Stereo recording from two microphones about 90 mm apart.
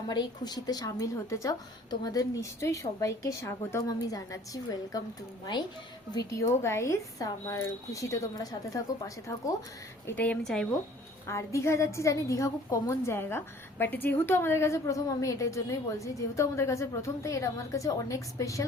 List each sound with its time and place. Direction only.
0.1 s a woman's voice: 50° left (ahead or behind)
6.1 s a woman's voice: 35° left (ahead or behind)
10.1 s a woman's voice: 20° left (ahead or behind)
10.4 s speech: 5° left (ahead or behind)
11.3 s a woman's voice: 35° left (ahead or behind)